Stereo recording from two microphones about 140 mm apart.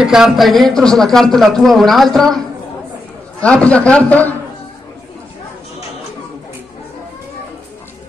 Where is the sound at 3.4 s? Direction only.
10° left (ahead or behind).